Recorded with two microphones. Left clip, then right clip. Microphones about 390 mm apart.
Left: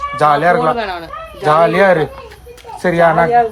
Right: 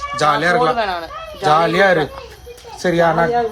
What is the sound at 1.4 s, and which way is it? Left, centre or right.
Speech, centre.